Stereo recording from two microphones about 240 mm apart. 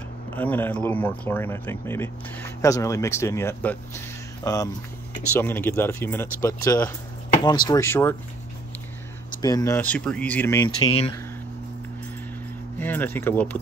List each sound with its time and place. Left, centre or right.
0.4 s speech: centre
9.4 s speech: centre
10.8 s speech: centre
12.7 s speech: centre